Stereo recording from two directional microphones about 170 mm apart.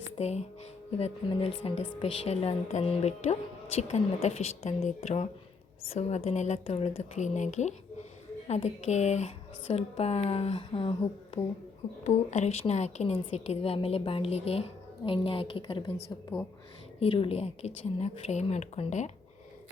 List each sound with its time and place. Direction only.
0.2 s a woman's voice: 40° left (ahead or behind)
12.0 s a woman's voice: 40° left (ahead or behind)
17.0 s a woman's voice: 35° left (ahead or behind)